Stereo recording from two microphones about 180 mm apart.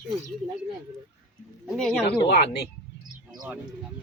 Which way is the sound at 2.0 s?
65° left (ahead or behind).